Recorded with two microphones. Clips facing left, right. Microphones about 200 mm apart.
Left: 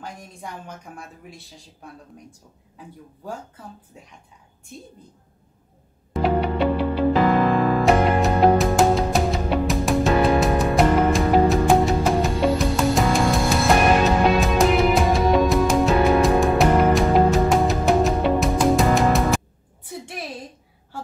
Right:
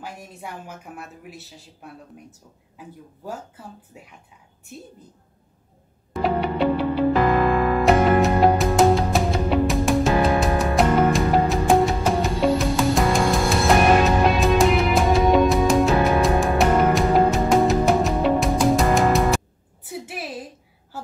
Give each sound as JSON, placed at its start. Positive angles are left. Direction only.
{"t": 0.0, "sound": "a woman's voice", "side_deg": -5}
{"t": 3.3, "sound": "a woman's voice", "side_deg": -5}
{"t": 6.1, "sound": "music", "side_deg": 0}
{"t": 7.8, "sound": "music", "side_deg": 0}